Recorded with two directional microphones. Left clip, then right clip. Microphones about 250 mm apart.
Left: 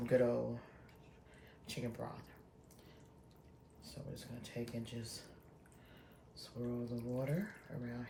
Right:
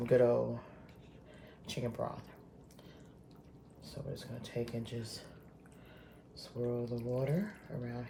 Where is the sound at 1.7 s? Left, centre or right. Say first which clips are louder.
Right 6 dB; right.